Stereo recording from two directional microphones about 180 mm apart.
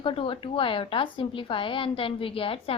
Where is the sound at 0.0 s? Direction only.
30° left (ahead or behind).